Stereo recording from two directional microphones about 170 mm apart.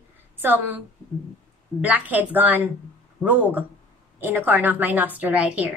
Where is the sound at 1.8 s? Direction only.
10° right (ahead or behind).